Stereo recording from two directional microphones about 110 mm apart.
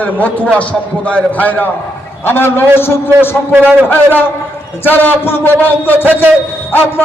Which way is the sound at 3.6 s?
15° left (ahead or behind).